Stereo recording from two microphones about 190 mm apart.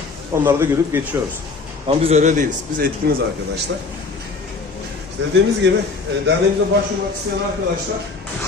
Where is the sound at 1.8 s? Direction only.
30° right (ahead or behind); by 3.1 s 50° right (ahead or behind).